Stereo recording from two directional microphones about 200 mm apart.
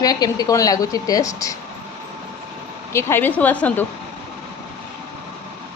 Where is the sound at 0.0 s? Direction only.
20° left (ahead or behind).